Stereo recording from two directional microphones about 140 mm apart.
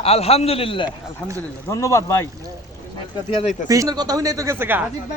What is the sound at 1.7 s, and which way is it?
Speech, 20° left (ahead or behind).